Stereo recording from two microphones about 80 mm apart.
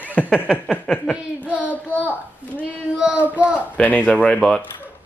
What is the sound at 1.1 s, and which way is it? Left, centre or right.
Child singing, centre.